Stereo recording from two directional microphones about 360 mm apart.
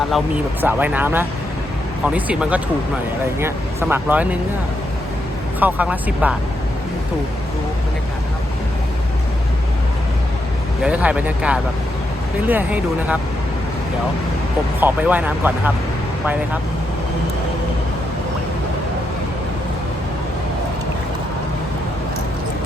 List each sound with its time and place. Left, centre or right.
0.6 s speech: centre
5.5 s speech: centre
10.8 s speech: centre
14.8 s speech: centre